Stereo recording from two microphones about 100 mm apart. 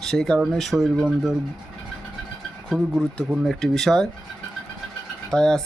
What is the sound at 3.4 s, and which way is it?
Speech, 5° left (ahead or behind).